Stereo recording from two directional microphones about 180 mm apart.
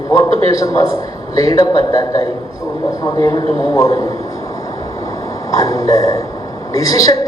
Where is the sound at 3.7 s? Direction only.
20° left (ahead or behind).